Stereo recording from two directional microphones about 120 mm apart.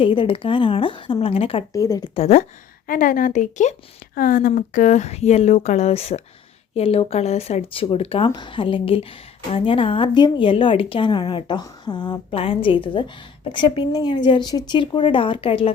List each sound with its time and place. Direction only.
0.0 s a woman's voice: 45° left (ahead or behind)
1.7 s speech: 30° left (ahead or behind)
2.1 s speech: 60° left (ahead or behind)
3.3 s speech: 85° left; by 8.3 s 55° left (ahead or behind)
8.3 s a woman's voice: 40° left (ahead or behind)
12.3 s a woman's voice: 50° left (ahead or behind)